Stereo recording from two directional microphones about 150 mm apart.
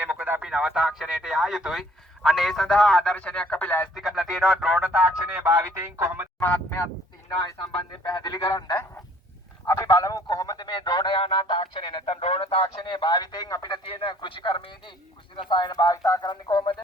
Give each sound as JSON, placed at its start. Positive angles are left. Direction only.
{"t": 0.0, "sound": "speech", "side_deg": -10}
{"t": 3.9, "sound": "speech", "side_deg": 0}
{"t": 6.4, "sound": "fowl", "side_deg": 15}
{"t": 8.0, "sound": "speech", "side_deg": 30}